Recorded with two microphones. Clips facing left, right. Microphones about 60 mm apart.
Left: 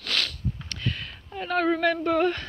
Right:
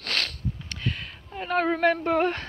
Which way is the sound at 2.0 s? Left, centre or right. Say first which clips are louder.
Even; right.